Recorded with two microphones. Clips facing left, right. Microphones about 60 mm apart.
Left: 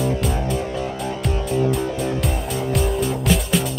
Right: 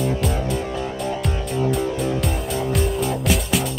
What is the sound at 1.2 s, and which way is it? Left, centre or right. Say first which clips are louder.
Music: left 6 dB; centre.